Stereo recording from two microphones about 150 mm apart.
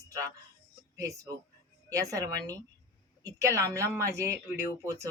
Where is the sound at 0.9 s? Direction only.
20° right (ahead or behind).